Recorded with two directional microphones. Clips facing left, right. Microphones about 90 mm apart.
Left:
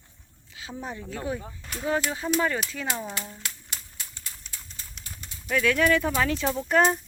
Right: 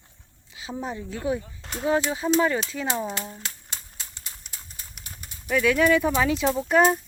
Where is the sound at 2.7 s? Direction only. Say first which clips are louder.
Right 4 dB; 20° right (ahead or behind).